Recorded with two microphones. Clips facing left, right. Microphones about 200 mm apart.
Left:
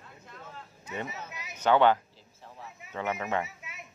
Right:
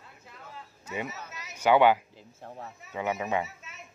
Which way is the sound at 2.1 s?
50° right (ahead or behind).